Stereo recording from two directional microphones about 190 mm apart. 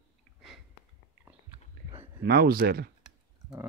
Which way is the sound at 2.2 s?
55° right (ahead or behind).